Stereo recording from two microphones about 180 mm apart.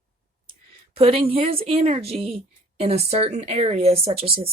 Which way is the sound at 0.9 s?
30° right (ahead or behind).